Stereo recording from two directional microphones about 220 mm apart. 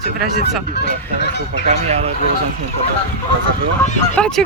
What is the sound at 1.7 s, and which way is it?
Speech, 30° right (ahead or behind).